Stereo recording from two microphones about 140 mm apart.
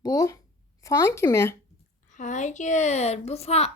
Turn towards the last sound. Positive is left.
turn(degrees=50)  # may be behind; listen again after turning